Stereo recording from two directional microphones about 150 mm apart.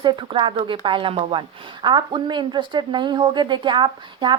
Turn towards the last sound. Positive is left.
turn(degrees=-30)  # may be behind; listen again after turning